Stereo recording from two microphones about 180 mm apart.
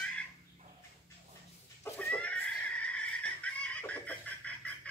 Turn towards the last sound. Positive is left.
turn(degrees=10)  # may be behind; listen again after turning